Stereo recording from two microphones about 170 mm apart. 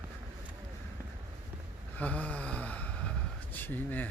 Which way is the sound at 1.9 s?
10° left (ahead or behind).